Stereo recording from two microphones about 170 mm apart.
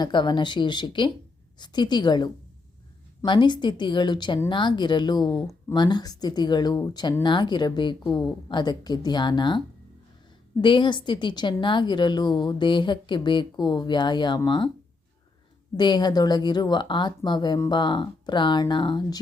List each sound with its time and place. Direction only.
0.0 s speech: 25° left (ahead or behind)
10.6 s speech: 30° left (ahead or behind)
15.8 s speech: 25° left (ahead or behind)